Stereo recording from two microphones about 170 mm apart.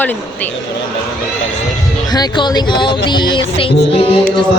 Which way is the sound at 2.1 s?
25° left (ahead or behind).